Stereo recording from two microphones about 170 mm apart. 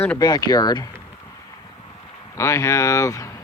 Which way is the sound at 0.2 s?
25° left (ahead or behind).